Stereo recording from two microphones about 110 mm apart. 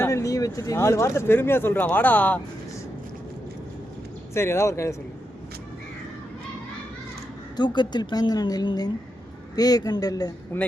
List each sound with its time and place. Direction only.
0.0 s speech: 30° left (ahead or behind)
4.4 s speech: 25° left (ahead or behind)
7.5 s a woman's voice: 40° left (ahead or behind)